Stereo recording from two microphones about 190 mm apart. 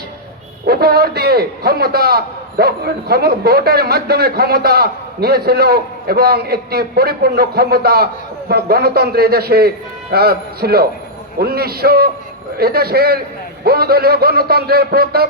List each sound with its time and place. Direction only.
0.6 s a man's voice: 55° right (ahead or behind)